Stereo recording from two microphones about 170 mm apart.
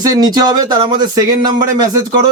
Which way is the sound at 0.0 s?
20° right (ahead or behind).